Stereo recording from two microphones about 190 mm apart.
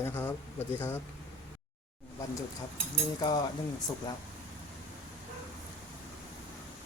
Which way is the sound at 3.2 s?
20° left (ahead or behind).